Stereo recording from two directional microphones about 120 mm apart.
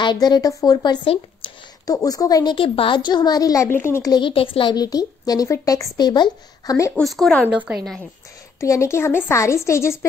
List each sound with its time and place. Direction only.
0.0 s speech: 40° left (ahead or behind)
1.0 s speech: 50° left (ahead or behind)
2.0 s speech: 30° left (ahead or behind)
2.5 s speech: 50° left (ahead or behind); by 4.1 s 20° left (ahead or behind)
4.1 s speech: 45° left (ahead or behind)
7.0 s speech: centre (ahead or behind)
8.5 s a woman's voice: 25° left (ahead or behind)